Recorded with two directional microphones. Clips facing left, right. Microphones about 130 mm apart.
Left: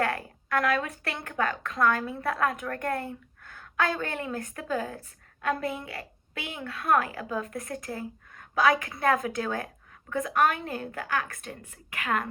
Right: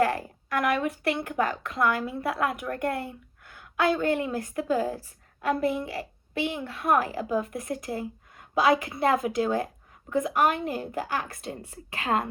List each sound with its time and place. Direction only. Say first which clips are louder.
0.6 s a woman's voice: right 4 dB; 25° right (ahead or behind)
4.7 s a woman's voice: right 4 dB; 35° right (ahead or behind)